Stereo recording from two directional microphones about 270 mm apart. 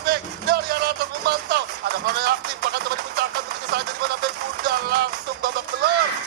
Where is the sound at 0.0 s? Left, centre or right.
Right.